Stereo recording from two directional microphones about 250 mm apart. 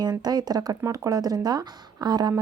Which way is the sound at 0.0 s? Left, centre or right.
Centre.